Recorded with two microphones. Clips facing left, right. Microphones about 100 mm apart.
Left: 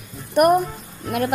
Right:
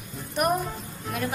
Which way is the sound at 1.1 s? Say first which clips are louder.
Left 8 dB; 75° left (ahead or behind).